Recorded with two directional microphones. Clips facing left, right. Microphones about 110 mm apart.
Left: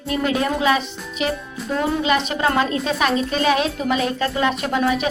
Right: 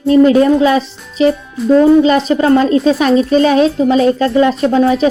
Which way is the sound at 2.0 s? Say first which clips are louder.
Right 9 dB; 35° right (ahead or behind).